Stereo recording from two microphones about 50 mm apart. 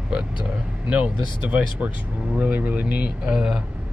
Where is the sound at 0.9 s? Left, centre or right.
Right.